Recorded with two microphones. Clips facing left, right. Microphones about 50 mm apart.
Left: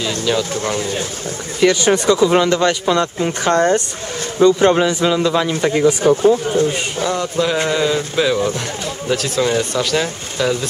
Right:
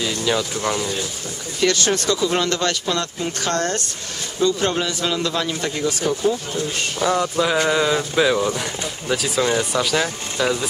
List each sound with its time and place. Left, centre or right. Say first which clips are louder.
0.0 s pigeon: left 2 dB; centre
0.4 s speech: left 3 dB; centre
1.6 s a man's voice: left 6 dB; centre
5.5 s speech: left 8 dB; left
7.0 s speech: right 1 dB; centre